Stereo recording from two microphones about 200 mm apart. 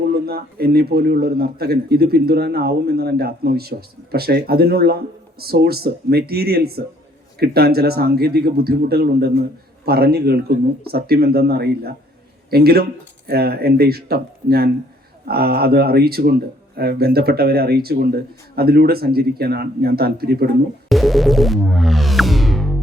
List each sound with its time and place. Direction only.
0.1 s a man's voice: 50° right (ahead or behind)
20.9 s music: centre (ahead or behind)